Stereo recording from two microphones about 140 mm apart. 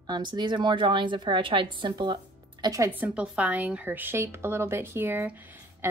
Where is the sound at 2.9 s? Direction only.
10° right (ahead or behind).